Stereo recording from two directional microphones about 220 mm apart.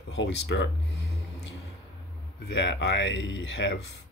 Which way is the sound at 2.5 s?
55° left (ahead or behind).